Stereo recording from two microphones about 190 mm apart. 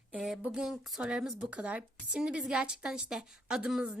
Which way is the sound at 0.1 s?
5° right (ahead or behind).